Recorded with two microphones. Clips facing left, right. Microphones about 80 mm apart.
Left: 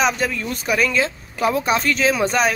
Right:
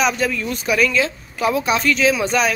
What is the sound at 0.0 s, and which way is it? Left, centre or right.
A woman's voice, left.